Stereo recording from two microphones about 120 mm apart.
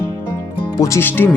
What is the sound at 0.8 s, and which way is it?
Speech, 25° left (ahead or behind).